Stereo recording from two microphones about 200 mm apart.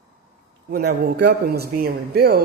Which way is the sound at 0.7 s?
50° right (ahead or behind).